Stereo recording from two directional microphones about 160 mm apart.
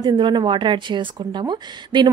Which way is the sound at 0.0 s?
25° right (ahead or behind).